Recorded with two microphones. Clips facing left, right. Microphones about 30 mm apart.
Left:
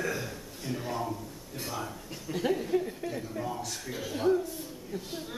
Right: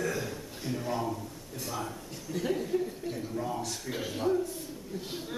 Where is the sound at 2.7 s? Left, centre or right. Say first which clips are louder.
Left 2 dB; left.